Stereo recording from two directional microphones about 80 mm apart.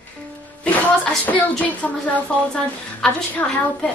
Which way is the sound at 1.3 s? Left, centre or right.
Centre.